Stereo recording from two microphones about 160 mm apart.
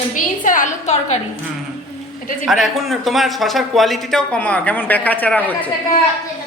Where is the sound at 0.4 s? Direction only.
55° left (ahead or behind).